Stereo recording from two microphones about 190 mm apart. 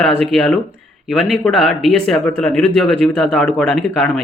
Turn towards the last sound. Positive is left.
turn(degrees=5)  # may be behind; listen again after turning